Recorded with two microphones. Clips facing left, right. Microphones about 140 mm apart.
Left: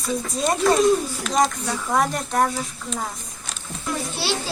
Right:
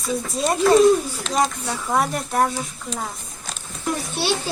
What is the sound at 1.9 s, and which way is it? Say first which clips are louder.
Speech: even; 5° right (ahead or behind).